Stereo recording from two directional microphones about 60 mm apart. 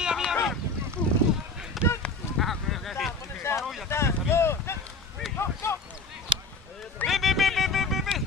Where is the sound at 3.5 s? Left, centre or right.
Left.